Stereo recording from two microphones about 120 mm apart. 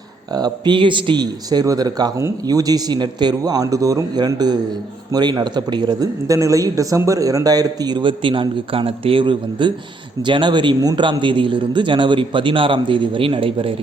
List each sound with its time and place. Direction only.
0.3 s a man's voice: 35° right (ahead or behind)